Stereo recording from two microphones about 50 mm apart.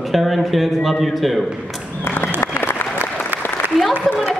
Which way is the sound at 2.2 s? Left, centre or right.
Left.